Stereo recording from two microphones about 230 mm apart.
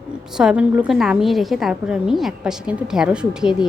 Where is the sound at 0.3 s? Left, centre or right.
Centre.